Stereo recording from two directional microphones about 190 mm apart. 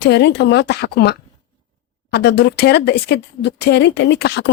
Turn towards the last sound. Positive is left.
turn(degrees=65)  # may be behind; listen again after turning